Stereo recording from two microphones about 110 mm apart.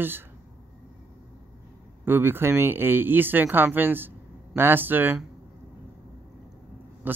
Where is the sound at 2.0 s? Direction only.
20° right (ahead or behind).